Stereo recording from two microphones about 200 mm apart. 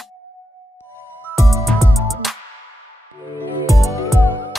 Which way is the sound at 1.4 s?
15° right (ahead or behind).